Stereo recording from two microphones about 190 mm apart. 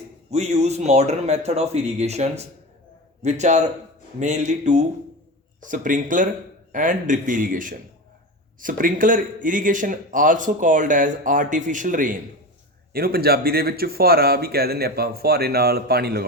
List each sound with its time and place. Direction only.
0.3 s speech: 35° right (ahead or behind); by 16.2 s 55° right (ahead or behind)